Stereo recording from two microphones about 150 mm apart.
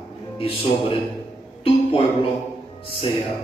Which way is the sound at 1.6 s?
40° left (ahead or behind).